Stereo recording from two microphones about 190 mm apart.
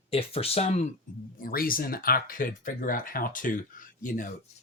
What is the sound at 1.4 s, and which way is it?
Speech, 50° left (ahead or behind).